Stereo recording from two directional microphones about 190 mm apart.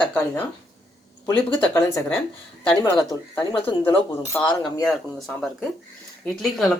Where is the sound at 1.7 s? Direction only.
10° left (ahead or behind).